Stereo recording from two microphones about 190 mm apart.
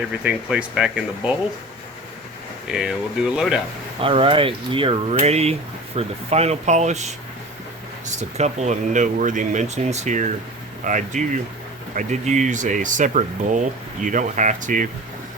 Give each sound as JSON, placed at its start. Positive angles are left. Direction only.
{"t": 0.1, "sound": "speech", "side_deg": -5}
{"t": 2.6, "sound": "speech", "side_deg": -5}
{"t": 4.0, "sound": "speech", "side_deg": -30}